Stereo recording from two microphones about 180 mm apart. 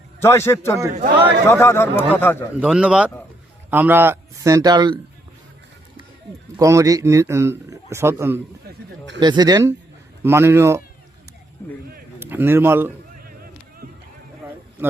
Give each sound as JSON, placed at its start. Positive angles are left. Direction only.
{"t": 0.2, "sound": "speech", "side_deg": 15}
{"t": 2.6, "sound": "a man's voice", "side_deg": -5}
{"t": 6.6, "sound": "a man's voice", "side_deg": -20}
{"t": 12.2, "sound": "speech", "side_deg": -10}